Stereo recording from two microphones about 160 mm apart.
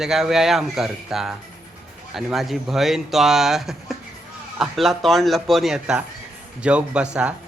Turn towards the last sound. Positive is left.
turn(degrees=-5)  # may be behind; listen again after turning